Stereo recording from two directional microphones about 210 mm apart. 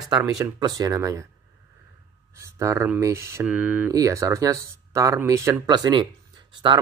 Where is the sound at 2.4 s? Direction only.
15° right (ahead or behind).